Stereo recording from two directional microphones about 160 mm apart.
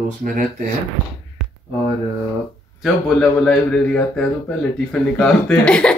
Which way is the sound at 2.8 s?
5° left (ahead or behind).